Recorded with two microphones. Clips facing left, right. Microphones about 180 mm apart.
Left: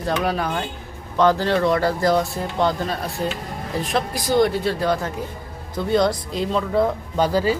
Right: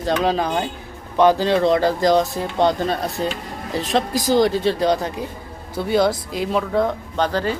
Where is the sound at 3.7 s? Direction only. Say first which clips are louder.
Right 3 dB; 85° right.